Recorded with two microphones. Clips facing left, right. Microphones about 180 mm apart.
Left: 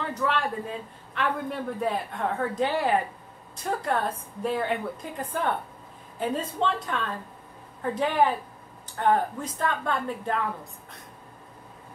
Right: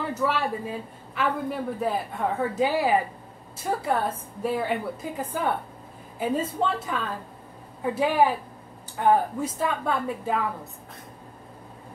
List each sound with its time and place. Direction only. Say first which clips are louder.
0.0 s a man's voice: right 2 dB; 5° right (ahead or behind)